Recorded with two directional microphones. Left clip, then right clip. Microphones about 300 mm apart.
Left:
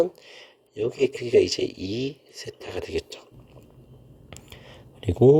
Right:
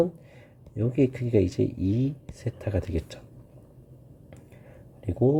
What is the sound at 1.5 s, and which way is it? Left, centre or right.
Speech, left.